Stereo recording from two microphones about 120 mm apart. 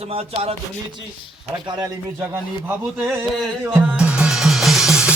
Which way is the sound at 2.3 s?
20° right (ahead or behind).